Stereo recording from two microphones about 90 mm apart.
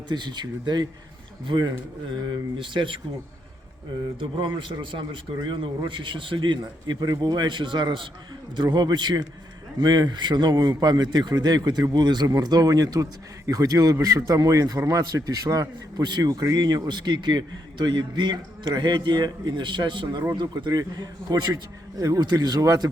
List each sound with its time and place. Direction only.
0.1 s a man's voice: 55° right (ahead or behind)
4.2 s a man's voice: 65° right (ahead or behind); by 22.9 s 45° right (ahead or behind)